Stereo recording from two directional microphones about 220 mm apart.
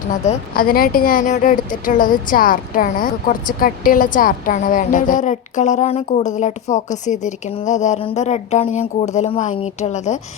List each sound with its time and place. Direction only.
0.3 s a woman's voice: 40° left (ahead or behind)